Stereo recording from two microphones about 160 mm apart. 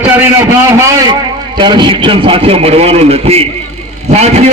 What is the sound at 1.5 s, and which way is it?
A man's voice, 30° right (ahead or behind).